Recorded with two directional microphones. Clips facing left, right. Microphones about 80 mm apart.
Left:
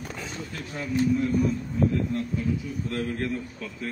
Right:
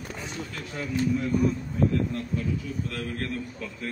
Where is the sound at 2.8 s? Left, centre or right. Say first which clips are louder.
Left 4 dB; left.